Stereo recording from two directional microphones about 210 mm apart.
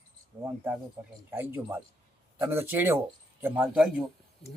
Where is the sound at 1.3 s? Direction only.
10° right (ahead or behind).